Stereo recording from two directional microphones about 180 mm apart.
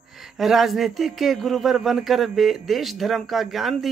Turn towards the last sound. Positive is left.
turn(degrees=0)  # may be behind; listen again after turning